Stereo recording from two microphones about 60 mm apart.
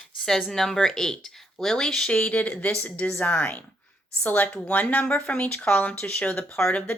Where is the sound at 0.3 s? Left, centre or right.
Centre.